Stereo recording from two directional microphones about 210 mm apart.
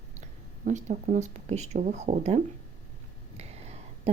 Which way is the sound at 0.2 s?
35° right (ahead or behind).